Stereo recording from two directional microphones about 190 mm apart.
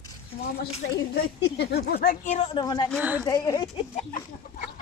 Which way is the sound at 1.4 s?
60° left (ahead or behind).